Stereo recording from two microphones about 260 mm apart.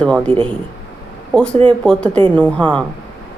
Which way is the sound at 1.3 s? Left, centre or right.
Centre.